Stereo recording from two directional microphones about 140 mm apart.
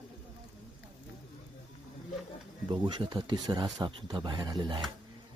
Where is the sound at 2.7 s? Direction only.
35° right (ahead or behind).